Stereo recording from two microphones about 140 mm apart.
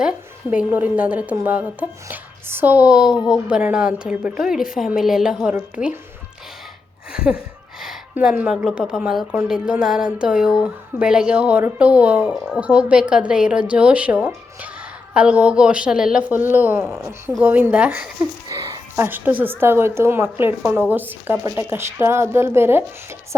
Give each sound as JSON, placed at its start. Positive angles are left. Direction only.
{"t": 0.5, "sound": "a woman's voice", "side_deg": -10}
{"t": 7.1, "sound": "a woman's voice", "side_deg": -5}